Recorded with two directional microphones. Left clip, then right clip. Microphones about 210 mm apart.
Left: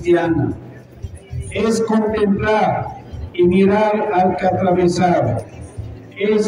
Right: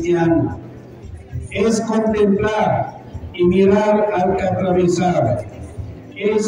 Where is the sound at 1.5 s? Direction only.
20° left (ahead or behind).